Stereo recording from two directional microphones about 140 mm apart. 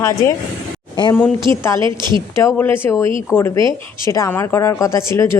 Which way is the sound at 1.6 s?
20° left (ahead or behind).